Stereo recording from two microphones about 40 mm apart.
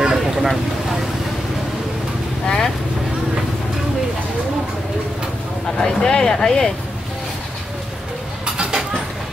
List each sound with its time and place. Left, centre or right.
0.0 s vehicle: centre
2.4 s vehicle: centre
5.8 s a sound: centre